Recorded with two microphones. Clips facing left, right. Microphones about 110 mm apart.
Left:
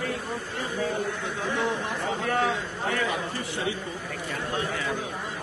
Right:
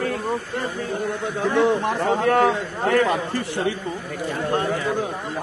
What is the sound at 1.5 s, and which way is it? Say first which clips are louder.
Speech: right 10 dB; 65° right (ahead or behind).